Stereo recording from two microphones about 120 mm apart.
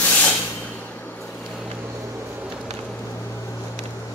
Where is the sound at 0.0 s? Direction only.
10° left (ahead or behind).